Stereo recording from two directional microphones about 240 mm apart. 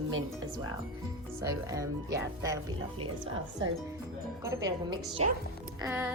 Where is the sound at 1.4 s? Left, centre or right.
Centre.